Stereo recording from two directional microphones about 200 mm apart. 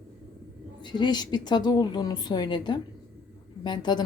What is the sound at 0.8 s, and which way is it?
A woman's voice, 20° left (ahead or behind).